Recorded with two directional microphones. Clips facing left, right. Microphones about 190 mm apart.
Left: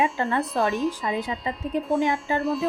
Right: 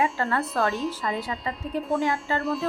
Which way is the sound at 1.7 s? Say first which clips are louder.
Left 3 dB; 20° left (ahead or behind).